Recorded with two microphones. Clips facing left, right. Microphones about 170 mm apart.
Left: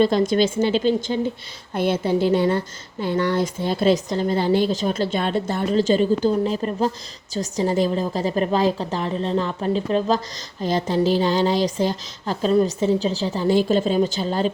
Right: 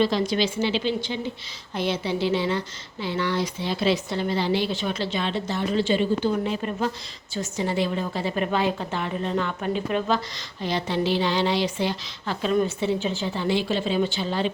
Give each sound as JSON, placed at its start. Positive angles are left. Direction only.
{"t": 0.0, "sound": "a woman's voice", "side_deg": 50}
{"t": 10.6, "sound": "speech", "side_deg": 45}